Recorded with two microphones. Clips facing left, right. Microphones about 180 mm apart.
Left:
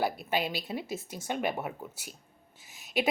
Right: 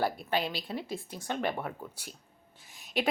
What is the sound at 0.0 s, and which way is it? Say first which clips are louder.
Speech: even; 10° left (ahead or behind).